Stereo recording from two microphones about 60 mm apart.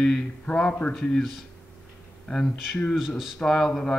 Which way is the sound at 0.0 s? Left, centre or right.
Centre.